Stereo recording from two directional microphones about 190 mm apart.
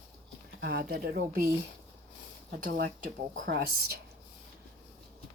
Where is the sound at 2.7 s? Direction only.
50° right (ahead or behind).